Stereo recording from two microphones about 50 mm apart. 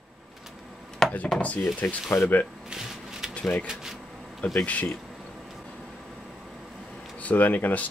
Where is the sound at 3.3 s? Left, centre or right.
Left.